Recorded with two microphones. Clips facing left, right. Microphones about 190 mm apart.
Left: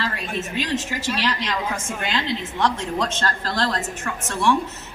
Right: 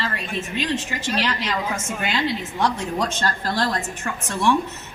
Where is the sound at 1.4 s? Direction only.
5° right (ahead or behind).